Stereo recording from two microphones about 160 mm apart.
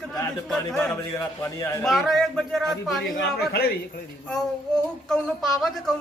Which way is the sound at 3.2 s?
80° left.